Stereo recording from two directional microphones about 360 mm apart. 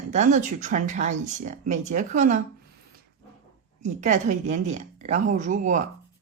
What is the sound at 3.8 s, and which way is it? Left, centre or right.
Speech, centre.